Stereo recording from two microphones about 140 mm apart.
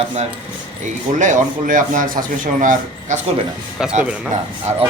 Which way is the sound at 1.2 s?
60° right (ahead or behind).